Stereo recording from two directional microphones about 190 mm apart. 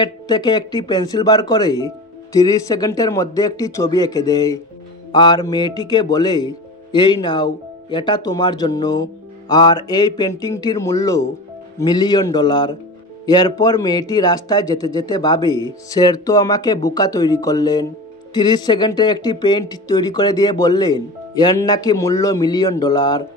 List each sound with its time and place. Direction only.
0.0 s speech: 20° left (ahead or behind)